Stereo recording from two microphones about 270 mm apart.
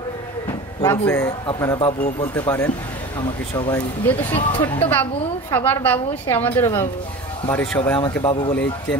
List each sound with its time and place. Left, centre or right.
0.8 s speech: centre
4.4 s speech: left
5.5 s speech: centre
8.1 s speech: centre